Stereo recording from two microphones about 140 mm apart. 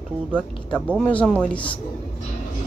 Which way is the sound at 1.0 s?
10° left (ahead or behind).